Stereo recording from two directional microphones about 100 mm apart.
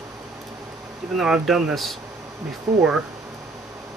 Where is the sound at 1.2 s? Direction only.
5° right (ahead or behind).